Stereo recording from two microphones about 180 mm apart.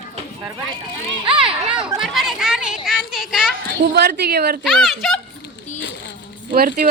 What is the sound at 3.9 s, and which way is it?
Speech, 65° right (ahead or behind).